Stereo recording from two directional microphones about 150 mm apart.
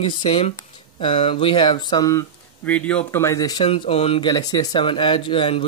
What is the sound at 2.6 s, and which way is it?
Speech, 10° left (ahead or behind).